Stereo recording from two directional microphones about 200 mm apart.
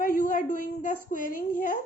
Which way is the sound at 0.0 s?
40° left (ahead or behind).